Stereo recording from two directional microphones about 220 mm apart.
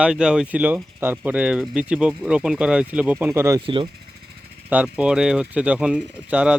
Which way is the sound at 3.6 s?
25° right (ahead or behind).